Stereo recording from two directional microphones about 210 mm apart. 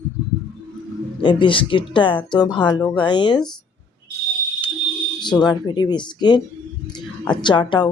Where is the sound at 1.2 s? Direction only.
25° left (ahead or behind).